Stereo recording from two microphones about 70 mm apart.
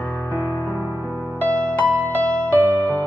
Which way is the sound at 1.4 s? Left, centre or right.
Left.